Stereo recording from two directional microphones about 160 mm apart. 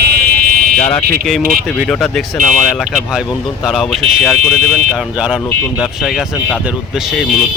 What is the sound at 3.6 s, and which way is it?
Speech, centre (ahead or behind).